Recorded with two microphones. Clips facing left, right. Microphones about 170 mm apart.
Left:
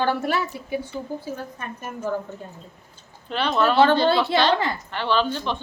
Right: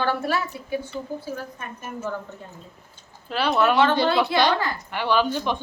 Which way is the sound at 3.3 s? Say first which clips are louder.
Right 1 dB; 5° right (ahead or behind).